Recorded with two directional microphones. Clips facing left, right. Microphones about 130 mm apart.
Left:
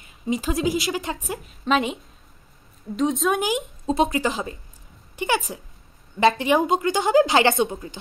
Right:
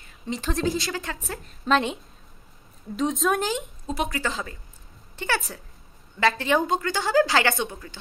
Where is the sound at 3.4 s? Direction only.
20° left (ahead or behind).